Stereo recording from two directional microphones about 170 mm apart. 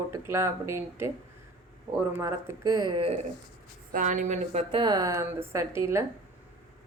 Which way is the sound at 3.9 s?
50° right (ahead or behind).